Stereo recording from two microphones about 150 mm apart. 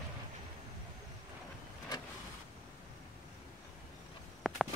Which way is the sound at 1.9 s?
30° left (ahead or behind).